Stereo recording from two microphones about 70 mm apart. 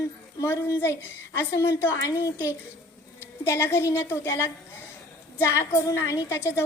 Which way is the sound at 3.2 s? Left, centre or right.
Left.